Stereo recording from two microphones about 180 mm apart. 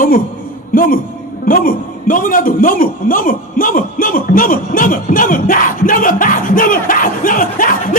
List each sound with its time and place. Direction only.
0.7 s a man's voice: 50° left (ahead or behind)